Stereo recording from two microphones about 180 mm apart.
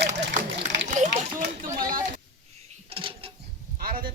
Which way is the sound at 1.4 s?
50° right (ahead or behind).